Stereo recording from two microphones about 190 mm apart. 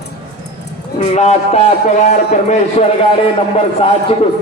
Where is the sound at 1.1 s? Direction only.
35° left (ahead or behind).